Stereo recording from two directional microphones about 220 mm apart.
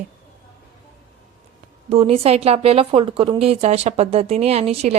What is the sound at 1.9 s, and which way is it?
Speech, 25° right (ahead or behind).